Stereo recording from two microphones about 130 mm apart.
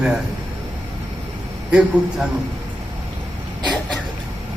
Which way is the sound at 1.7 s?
10° right (ahead or behind).